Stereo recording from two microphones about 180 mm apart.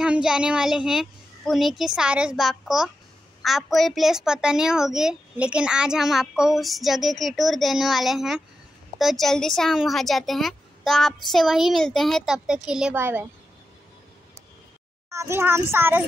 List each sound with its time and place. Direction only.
0.0 s a child's voice: 5° right (ahead or behind)
15.0 s a woman's voice: 15° right (ahead or behind)